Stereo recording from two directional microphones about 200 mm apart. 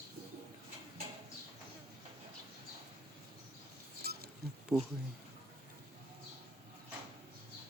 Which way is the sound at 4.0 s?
50° right (ahead or behind).